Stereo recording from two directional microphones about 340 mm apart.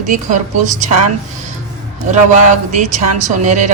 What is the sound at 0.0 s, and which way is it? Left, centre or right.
A woman's voice, right.